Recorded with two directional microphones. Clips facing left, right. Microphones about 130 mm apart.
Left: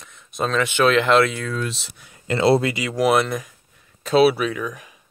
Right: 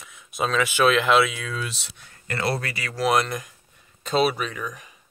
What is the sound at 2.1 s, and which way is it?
Speech, 20° left (ahead or behind).